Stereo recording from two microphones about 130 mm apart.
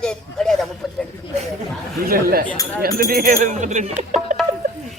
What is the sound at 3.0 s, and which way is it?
Speech, 90° right.